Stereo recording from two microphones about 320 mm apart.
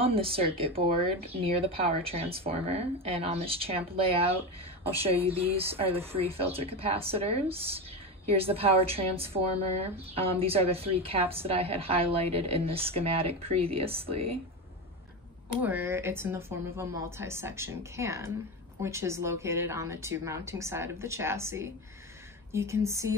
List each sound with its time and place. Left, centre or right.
0.0 s speech: centre
15.6 s speech: centre